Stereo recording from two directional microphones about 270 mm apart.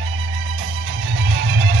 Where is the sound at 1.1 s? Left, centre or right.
Right.